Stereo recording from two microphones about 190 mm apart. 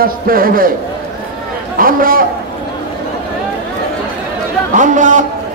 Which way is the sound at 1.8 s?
50° right (ahead or behind).